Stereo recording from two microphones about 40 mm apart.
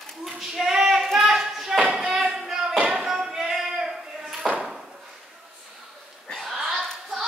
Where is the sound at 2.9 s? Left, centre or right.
Centre.